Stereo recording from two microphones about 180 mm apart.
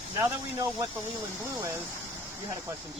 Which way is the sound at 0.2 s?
20° right (ahead or behind).